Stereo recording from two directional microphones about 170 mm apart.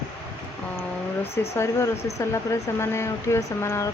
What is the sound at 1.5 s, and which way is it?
Speech, 15° left (ahead or behind).